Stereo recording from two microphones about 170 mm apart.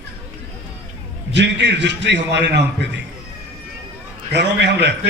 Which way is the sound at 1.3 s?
90° right.